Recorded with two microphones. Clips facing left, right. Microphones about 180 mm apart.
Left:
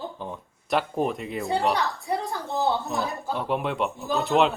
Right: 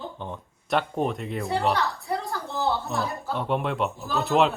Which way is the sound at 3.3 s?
Centre (ahead or behind).